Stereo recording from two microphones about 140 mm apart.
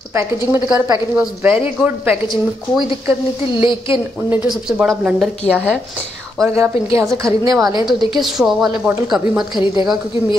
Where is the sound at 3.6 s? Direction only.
35° left (ahead or behind).